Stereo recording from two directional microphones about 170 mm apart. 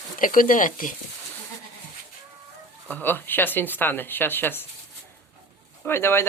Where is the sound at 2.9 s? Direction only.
10° left (ahead or behind).